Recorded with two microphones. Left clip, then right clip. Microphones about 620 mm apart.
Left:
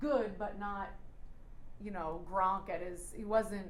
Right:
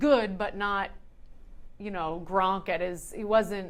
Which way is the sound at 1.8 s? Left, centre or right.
Right.